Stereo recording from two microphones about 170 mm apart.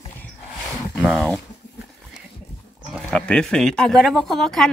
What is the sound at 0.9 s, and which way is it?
Speech, centre (ahead or behind).